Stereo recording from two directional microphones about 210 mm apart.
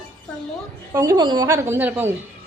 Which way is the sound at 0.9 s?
20° right (ahead or behind).